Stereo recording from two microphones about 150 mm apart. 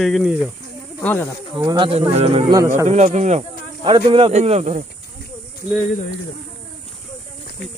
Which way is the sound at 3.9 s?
35° right (ahead or behind).